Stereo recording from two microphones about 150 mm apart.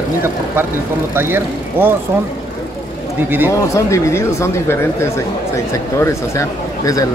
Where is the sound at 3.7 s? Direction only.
20° left (ahead or behind).